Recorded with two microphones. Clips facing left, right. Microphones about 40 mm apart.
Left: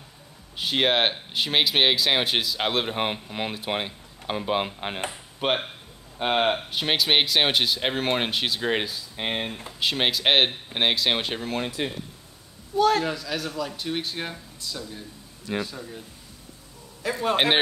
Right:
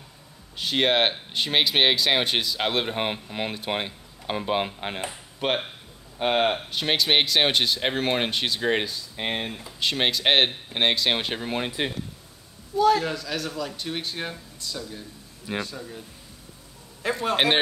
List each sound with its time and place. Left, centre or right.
0.6 s speech: centre
11.4 s speech: centre
12.7 s a man's voice: left
13.0 s speech: centre
17.2 s speech: centre